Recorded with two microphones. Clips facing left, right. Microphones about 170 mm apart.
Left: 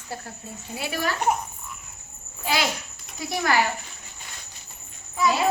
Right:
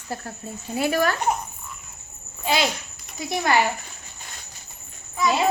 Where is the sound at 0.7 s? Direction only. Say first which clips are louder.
Right 7 dB; 50° right (ahead or behind).